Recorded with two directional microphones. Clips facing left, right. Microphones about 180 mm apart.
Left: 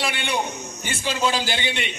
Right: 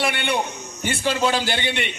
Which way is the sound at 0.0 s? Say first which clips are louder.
Right 3 dB; 60° right (ahead or behind).